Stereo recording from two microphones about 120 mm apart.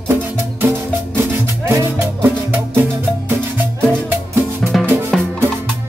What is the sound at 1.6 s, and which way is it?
Music, 20° right (ahead or behind).